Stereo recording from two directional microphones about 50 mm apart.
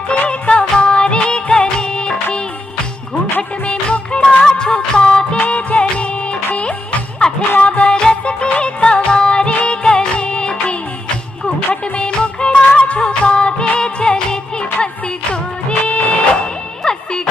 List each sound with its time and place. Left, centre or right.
0.3 s music: left
3.6 s music: left
5.4 s music: left
15.9 s music: left